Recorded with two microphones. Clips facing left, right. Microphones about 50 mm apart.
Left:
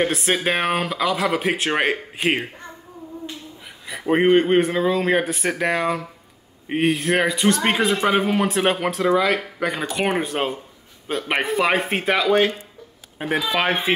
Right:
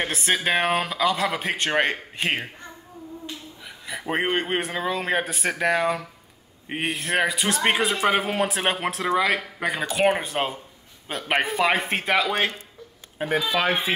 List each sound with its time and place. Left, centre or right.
0.0 s speech: centre
3.9 s speech: centre
12.3 s speech: centre
13.3 s speech: centre
13.6 s speech: left